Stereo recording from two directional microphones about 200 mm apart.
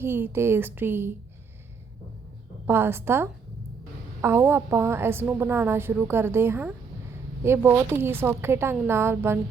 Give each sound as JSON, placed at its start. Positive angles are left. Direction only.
{"t": 0.0, "sound": "a woman's voice", "side_deg": -10}
{"t": 2.6, "sound": "a woman's voice", "side_deg": -10}